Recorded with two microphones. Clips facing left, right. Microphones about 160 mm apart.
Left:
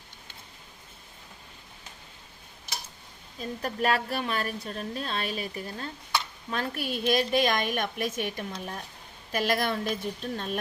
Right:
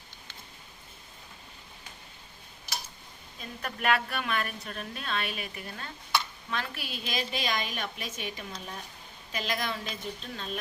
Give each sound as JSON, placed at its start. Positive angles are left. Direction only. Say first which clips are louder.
{"t": 3.6, "sound": "a woman's voice", "louder": "left 1 dB", "side_deg": 35}